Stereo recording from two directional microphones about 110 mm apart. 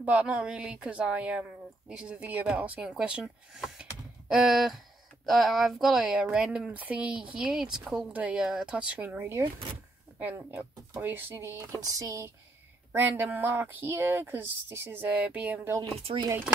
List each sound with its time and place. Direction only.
0.0 s speech: 15° right (ahead or behind)
11.8 s a sound: 30° right (ahead or behind)
12.9 s speech: 15° right (ahead or behind)
16.1 s speech: 55° right (ahead or behind)